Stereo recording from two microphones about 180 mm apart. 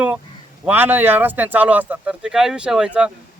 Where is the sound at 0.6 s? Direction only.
10° right (ahead or behind).